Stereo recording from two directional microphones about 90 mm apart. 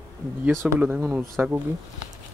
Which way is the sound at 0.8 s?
20° right (ahead or behind).